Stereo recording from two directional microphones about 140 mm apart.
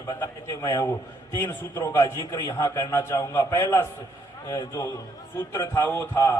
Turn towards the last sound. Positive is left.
turn(degrees=20)  # may be behind; listen again after turning